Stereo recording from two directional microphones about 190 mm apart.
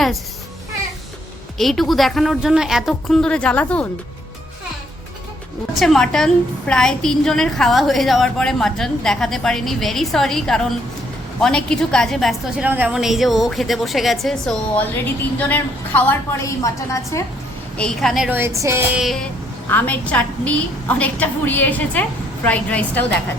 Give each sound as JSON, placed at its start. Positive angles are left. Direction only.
{"t": 1.5, "sound": "a woman's voice", "side_deg": 0}
{"t": 5.7, "sound": "a woman's voice", "side_deg": 0}
{"t": 17.7, "sound": "speech", "side_deg": 5}
{"t": 18.9, "sound": "a woman's voice", "side_deg": 0}